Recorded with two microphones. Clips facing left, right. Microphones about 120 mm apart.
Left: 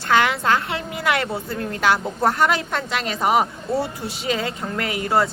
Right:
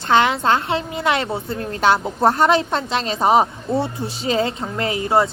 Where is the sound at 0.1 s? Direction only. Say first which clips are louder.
Right 2 dB; 25° right (ahead or behind).